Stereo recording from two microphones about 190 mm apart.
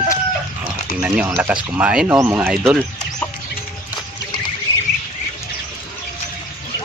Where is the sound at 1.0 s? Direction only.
10° right (ahead or behind).